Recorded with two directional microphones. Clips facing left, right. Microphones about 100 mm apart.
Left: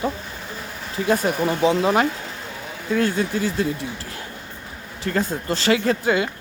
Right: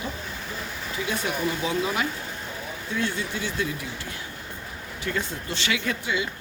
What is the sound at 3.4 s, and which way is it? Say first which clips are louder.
Speech: left 6 dB; 35° left (ahead or behind).